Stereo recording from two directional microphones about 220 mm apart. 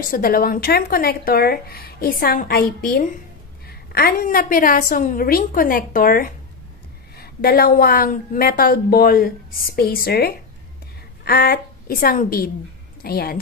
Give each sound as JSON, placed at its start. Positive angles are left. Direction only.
{"t": 0.1, "sound": "a woman's voice", "side_deg": 40}